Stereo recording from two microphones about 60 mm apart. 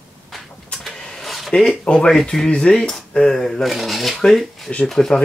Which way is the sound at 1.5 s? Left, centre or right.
Centre.